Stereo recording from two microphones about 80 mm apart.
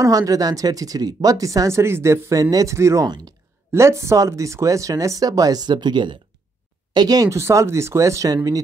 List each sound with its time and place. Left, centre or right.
0.0 s speech: right
6.9 s speech: right
7.2 s speech: right